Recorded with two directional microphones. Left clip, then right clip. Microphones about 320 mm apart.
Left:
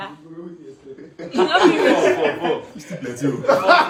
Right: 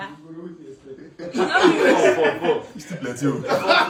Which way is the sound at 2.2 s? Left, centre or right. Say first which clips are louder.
Right 1 dB; centre.